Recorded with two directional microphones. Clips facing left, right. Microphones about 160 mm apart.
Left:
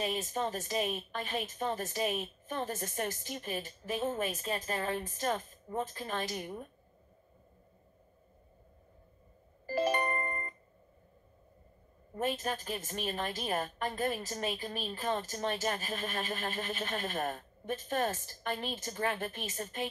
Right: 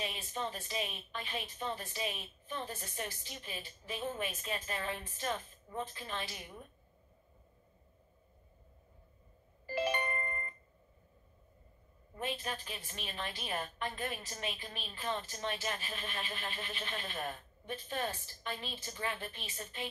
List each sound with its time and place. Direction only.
0.0 s a woman's voice: 40° left (ahead or behind)
9.7 s music: 40° left (ahead or behind)
12.1 s a woman's voice: 45° left (ahead or behind)